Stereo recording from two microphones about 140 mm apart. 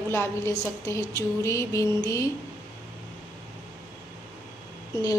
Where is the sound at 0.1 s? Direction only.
20° left (ahead or behind).